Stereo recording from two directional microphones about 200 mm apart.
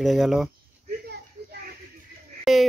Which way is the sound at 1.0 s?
55° right (ahead or behind).